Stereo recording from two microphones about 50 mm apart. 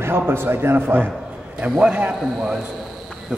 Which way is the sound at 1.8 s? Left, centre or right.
Right.